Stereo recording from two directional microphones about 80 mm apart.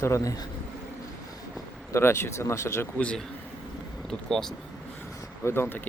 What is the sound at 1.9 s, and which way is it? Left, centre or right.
Speech, left.